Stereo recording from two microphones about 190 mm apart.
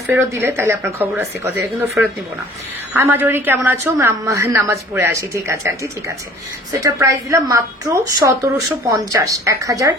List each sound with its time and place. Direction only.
0.1 s a woman's voice: 10° right (ahead or behind)
2.9 s a woman's voice: 10° right (ahead or behind)